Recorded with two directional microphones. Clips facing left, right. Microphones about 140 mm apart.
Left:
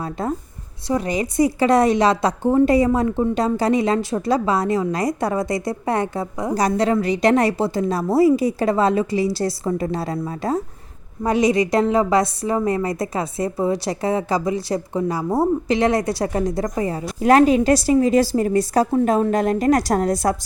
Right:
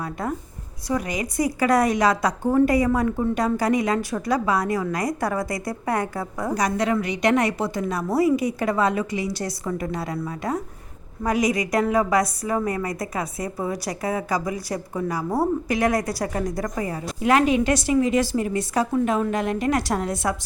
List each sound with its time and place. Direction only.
0.0 s a woman's voice: 25° left (ahead or behind)
17.2 s a woman's voice: 40° left (ahead or behind)